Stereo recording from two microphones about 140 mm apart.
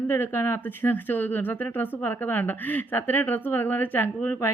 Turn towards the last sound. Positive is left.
turn(degrees=15)  # may be behind; listen again after turning